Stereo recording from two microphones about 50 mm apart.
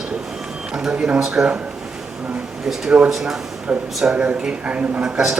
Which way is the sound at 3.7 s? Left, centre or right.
Centre.